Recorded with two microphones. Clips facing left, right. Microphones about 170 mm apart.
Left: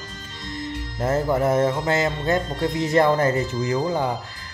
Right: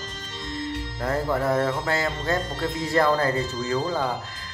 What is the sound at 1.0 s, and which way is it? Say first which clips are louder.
Mantra: left 4 dB; 20° left (ahead or behind).